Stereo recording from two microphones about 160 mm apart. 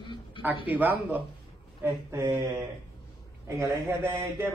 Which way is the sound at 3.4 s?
15° right (ahead or behind).